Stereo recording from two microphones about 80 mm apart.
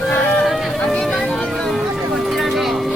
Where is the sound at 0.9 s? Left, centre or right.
Centre.